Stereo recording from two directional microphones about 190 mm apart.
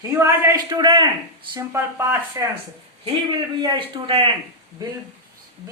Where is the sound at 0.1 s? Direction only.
15° right (ahead or behind).